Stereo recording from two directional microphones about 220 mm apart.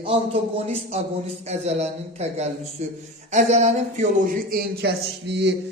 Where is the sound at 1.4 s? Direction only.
30° right (ahead or behind).